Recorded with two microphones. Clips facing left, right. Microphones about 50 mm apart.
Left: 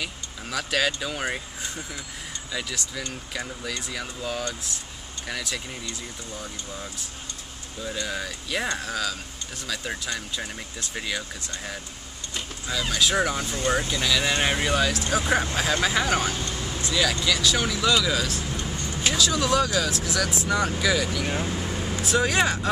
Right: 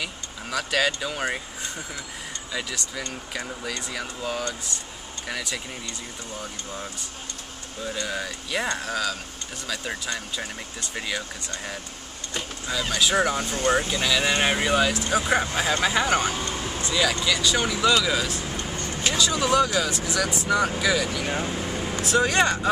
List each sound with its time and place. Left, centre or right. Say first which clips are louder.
0.0 s speech: right 1 dB; centre
7.8 s speech: right 1 dB; centre
16.5 s vehicle: right 2 dB; right
16.8 s speech: even; centre
18.8 s vehicle: right 1 dB; right
19.0 s speech: even; centre